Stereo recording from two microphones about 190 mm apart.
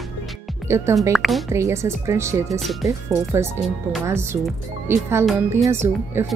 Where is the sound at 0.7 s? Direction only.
15° right (ahead or behind).